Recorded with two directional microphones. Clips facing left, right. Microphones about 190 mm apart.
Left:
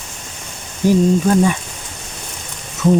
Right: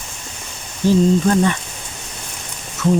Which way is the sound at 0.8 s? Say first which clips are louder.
Left 1 dB; 10° left (ahead or behind).